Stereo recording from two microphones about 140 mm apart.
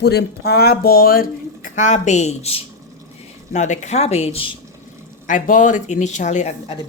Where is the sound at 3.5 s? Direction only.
60° left (ahead or behind).